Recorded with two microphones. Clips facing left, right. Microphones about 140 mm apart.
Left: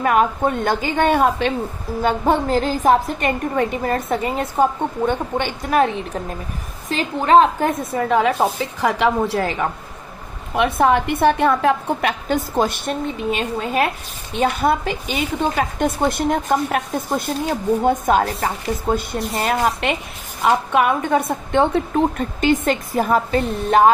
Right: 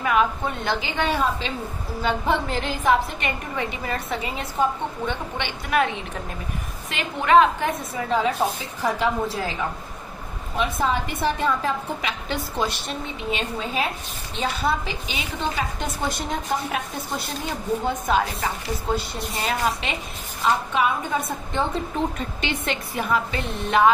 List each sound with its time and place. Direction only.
0.0 s a woman's voice: 45° left (ahead or behind)
2.0 s a woman's voice: 45° left (ahead or behind)
6.9 s a woman's voice: 35° left (ahead or behind)
7.9 s a woman's voice: 65° left (ahead or behind)
22.4 s a woman's voice: 45° left (ahead or behind)